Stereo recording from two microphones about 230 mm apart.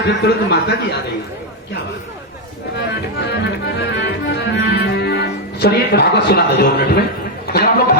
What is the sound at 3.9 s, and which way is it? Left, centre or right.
Music, left.